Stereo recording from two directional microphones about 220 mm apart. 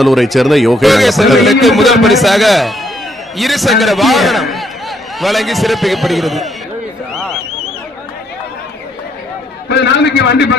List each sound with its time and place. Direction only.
0.0 s a man's voice: centre (ahead or behind)
9.7 s a man's voice: 50° left (ahead or behind)